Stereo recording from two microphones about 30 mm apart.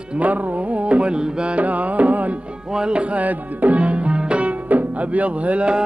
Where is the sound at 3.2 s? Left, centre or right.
Right.